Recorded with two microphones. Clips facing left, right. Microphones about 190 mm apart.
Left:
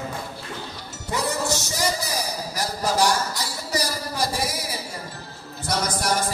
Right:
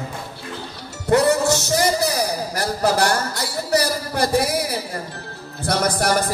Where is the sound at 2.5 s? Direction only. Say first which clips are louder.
Right 3 dB; 60° right (ahead or behind).